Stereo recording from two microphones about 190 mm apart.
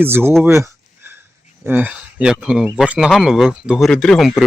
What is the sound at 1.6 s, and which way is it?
Speech, 10° right (ahead or behind).